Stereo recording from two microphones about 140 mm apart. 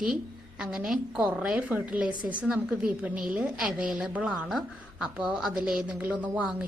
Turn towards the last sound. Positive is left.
turn(degrees=-10)  # may be behind; listen again after turning